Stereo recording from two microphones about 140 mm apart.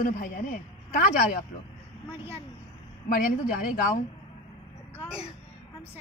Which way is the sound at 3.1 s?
80° left.